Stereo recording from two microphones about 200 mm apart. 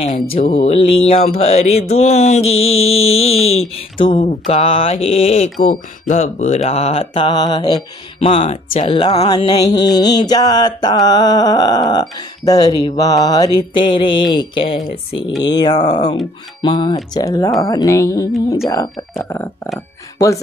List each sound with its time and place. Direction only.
0.3 s mantra: 40° left (ahead or behind)
0.6 s mantra: 30° left (ahead or behind)
3.7 s speech: 25° left (ahead or behind); by 19.7 s 10° left (ahead or behind)